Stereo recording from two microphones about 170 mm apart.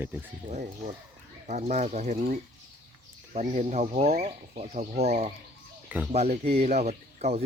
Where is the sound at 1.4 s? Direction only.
40° right (ahead or behind).